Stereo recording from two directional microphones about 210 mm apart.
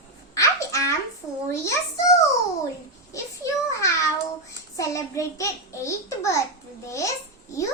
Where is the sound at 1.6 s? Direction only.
15° left (ahead or behind).